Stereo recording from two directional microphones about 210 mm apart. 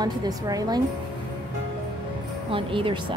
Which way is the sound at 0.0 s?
20° right (ahead or behind).